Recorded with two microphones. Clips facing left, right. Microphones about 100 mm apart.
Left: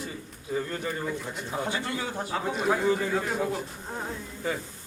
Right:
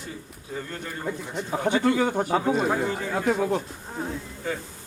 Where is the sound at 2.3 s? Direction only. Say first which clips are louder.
Right 4 dB; 35° right (ahead or behind).